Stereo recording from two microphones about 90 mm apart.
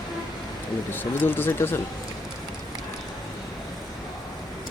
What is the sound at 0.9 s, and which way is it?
Speech, 25° left (ahead or behind).